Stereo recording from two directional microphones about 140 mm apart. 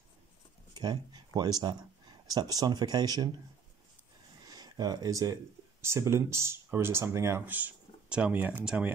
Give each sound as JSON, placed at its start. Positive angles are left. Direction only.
{"t": 0.7, "sound": "speech", "side_deg": -30}
{"t": 4.5, "sound": "speech", "side_deg": -30}